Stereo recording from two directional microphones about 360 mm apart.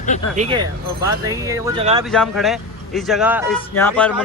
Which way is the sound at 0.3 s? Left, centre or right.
Centre.